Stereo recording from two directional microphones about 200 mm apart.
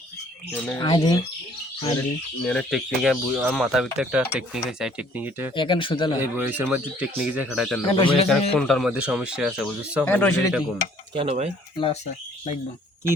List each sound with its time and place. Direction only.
0.5 s speech: 5° left (ahead or behind)
0.8 s speech: 20° left (ahead or behind)
2.4 s speech: 5° left (ahead or behind)
5.5 s speech: 25° left (ahead or behind)
6.1 s speech: 10° right (ahead or behind)
7.9 s speech: 25° left (ahead or behind)
8.5 s speech: centre (ahead or behind)
11.1 s speech: 30° right (ahead or behind)